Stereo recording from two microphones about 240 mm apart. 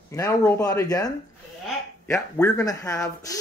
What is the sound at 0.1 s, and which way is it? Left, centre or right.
Speech, centre.